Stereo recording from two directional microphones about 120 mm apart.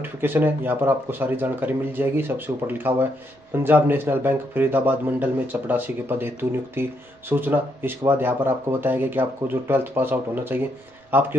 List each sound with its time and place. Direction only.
0.0 s a man's voice: 15° right (ahead or behind)